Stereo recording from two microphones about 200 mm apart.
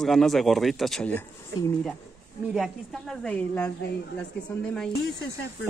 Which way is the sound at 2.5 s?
Centre (ahead or behind).